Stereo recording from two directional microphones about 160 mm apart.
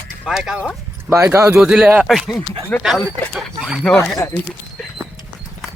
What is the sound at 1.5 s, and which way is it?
Speech, 5° right (ahead or behind).